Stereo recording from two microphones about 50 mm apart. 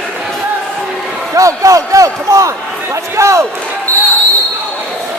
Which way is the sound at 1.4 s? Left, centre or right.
Right.